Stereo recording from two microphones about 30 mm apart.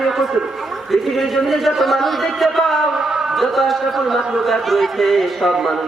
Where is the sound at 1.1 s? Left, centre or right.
Centre.